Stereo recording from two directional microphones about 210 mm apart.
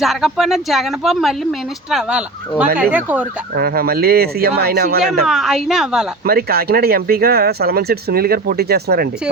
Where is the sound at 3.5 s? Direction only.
45° right (ahead or behind).